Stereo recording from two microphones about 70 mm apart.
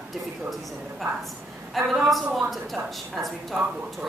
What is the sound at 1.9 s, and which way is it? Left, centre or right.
Speech, centre.